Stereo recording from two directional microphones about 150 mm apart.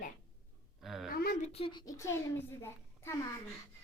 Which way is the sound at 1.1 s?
80° left.